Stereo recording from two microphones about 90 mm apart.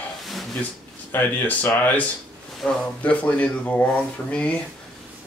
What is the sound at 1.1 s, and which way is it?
Speech, 20° left (ahead or behind).